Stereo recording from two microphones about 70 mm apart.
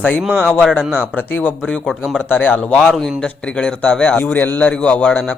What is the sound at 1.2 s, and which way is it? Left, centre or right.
Speech, left.